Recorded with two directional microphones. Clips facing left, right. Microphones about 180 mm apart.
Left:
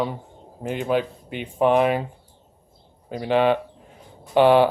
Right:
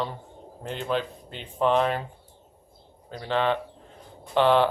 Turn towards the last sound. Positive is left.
turn(degrees=10)  # may be behind; listen again after turning